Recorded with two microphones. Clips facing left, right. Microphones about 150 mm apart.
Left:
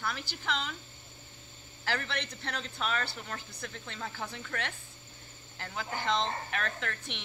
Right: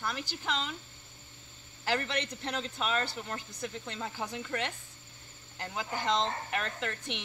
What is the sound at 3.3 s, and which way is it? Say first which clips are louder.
Speech: right 2 dB; 20° right (ahead or behind).